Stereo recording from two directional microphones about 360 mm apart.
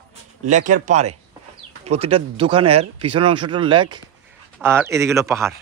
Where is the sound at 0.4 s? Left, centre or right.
Right.